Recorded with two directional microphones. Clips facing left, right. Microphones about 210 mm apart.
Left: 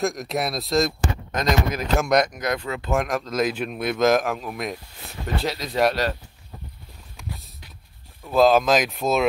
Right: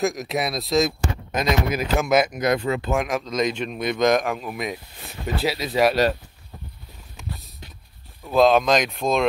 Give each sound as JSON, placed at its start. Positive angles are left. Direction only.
{"t": 0.0, "sound": "speech", "side_deg": 0}
{"t": 2.5, "sound": "speech", "side_deg": -20}
{"t": 2.9, "sound": "speech", "side_deg": 0}
{"t": 7.2, "sound": "a sound", "side_deg": 0}
{"t": 8.3, "sound": "speech", "side_deg": 0}